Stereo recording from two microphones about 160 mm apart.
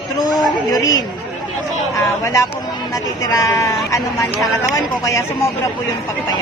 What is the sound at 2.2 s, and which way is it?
Speech, 20° left (ahead or behind).